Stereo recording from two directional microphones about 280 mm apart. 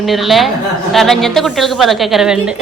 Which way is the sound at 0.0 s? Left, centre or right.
Centre.